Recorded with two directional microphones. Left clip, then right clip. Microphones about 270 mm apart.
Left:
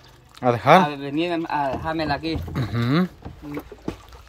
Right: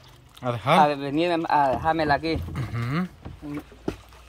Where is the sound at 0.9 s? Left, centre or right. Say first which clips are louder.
Right 1 dB; centre.